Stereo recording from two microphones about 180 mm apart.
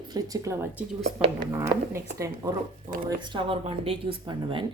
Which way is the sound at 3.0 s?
25° right (ahead or behind).